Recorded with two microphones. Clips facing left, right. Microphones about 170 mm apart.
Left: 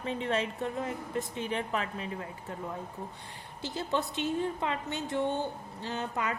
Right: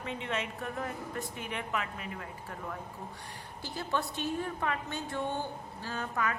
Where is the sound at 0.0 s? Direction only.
35° left (ahead or behind).